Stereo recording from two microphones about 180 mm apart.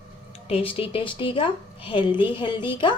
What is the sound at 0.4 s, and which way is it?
A woman's voice, 30° left (ahead or behind).